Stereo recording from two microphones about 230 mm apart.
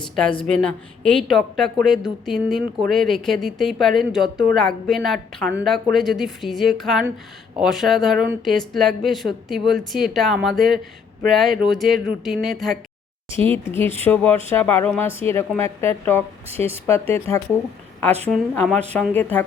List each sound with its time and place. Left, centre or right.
0.2 s speech: centre
16.5 s speech: right
17.2 s speech: centre